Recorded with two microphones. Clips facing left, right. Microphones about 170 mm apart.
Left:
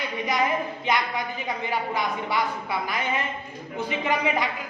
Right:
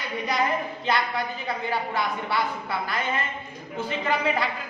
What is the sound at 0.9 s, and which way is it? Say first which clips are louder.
A man's voice: right 1 dB; 15° left (ahead or behind).